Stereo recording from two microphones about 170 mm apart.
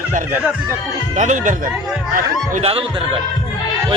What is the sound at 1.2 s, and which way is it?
Speech, 45° right (ahead or behind).